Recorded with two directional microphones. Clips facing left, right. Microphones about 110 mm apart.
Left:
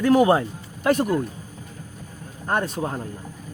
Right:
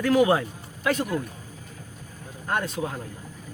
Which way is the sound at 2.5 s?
40° left (ahead or behind).